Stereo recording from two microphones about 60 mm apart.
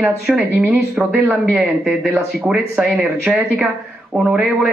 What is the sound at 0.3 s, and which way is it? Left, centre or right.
Speech, centre.